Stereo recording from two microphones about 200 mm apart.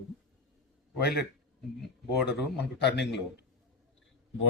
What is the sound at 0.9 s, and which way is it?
Speech, 55° left (ahead or behind).